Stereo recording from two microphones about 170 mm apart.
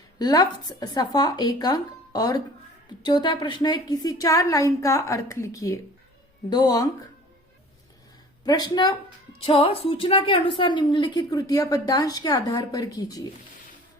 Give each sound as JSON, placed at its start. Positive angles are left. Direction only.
{"t": 0.2, "sound": "a woman's voice", "side_deg": 25}
{"t": 8.4, "sound": "a woman's voice", "side_deg": 25}
{"t": 9.5, "sound": "a woman's voice", "side_deg": 35}